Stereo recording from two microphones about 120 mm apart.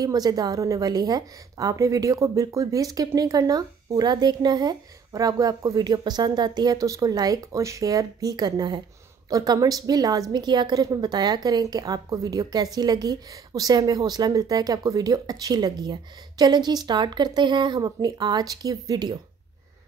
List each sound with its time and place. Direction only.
0.0 s a woman's voice: 30° right (ahead or behind)